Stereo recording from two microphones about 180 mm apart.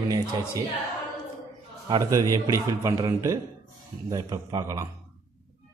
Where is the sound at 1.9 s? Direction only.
20° right (ahead or behind).